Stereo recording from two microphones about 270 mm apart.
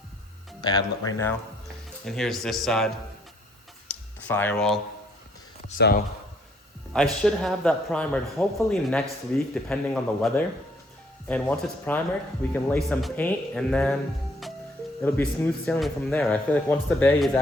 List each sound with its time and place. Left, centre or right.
0.6 s speech: centre
3.8 s a sound: centre
5.6 s speech: left
6.9 s speech: centre